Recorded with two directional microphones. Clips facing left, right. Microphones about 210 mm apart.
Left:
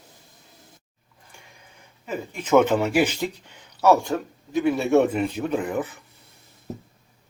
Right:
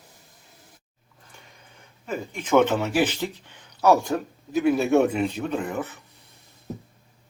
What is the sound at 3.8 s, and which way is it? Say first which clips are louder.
A man's voice: left 1 dB; centre (ahead or behind).